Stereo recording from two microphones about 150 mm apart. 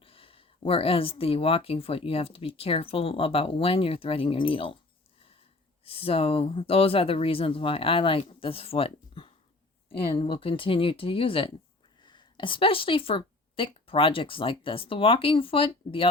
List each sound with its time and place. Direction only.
0.0 s speech: 40° left (ahead or behind)
5.8 s speech: 40° left (ahead or behind)